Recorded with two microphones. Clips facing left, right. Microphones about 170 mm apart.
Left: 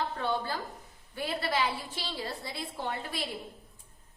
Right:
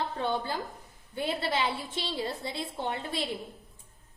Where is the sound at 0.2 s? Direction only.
20° right (ahead or behind).